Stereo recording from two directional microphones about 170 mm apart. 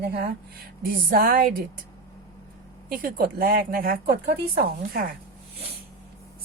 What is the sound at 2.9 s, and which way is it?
A woman's voice, 55° right (ahead or behind).